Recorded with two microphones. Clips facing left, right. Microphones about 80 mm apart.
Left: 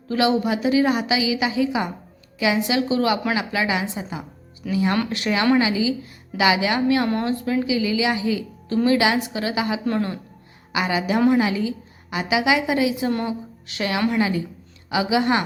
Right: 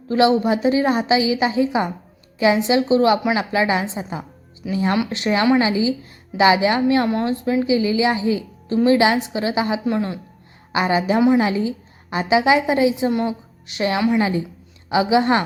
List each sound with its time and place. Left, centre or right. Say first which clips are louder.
0.1 s a woman's voice: right 4 dB; right
9.8 s speech: right 2 dB; centre
10.7 s a woman's voice: right 4 dB; right